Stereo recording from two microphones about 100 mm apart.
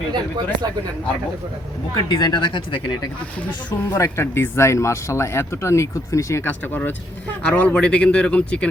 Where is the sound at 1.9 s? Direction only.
45° left (ahead or behind).